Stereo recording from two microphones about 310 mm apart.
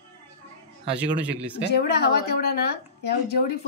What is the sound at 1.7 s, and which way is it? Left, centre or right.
A woman's voice, left.